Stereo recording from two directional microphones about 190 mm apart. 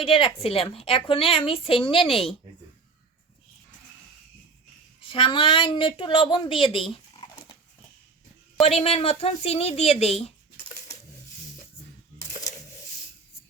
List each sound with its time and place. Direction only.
0.0 s a woman's voice: 30° left (ahead or behind)
4.9 s a woman's voice: 30° left (ahead or behind)
6.9 s a sound: 25° left (ahead or behind)
8.6 s speech: 30° left (ahead or behind)